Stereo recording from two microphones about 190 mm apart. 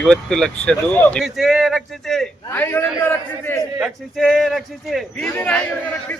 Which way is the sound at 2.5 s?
10° left (ahead or behind).